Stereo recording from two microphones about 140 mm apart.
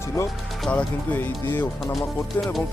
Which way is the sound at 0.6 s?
10° left (ahead or behind).